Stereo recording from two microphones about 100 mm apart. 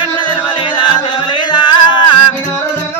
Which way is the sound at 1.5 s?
50° left (ahead or behind).